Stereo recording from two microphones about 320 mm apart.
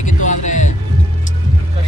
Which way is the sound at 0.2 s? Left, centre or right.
Left.